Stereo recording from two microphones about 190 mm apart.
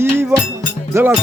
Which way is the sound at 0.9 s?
15° right (ahead or behind).